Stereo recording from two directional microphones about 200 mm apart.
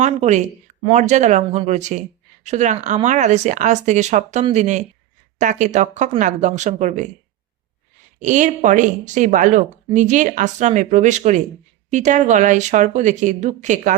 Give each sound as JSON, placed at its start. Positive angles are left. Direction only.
{"t": 0.0, "sound": "speech", "side_deg": -35}
{"t": 8.2, "sound": "speech", "side_deg": -40}